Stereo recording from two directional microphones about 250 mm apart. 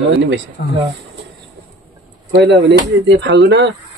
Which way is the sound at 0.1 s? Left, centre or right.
Right.